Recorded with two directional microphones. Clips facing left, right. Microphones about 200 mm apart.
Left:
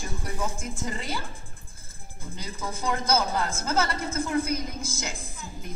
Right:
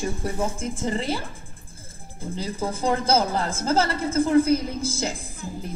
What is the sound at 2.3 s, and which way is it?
A woman's voice, 30° right (ahead or behind).